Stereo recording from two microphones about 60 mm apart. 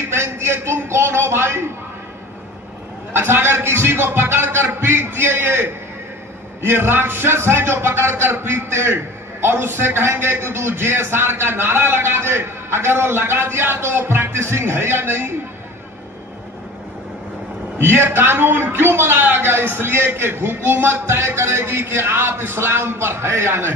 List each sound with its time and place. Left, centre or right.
0.1 s a man's voice: right
3.1 s a man's voice: right
17.7 s a man's voice: right